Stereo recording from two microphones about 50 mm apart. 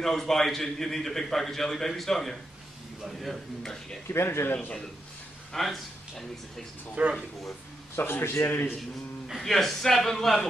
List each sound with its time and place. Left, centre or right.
0.0 s a man's voice: centre
4.1 s speech: left
5.5 s speech: centre
7.0 s speech: right
7.9 s speech: left
8.5 s speech: left
9.4 s a man's voice: centre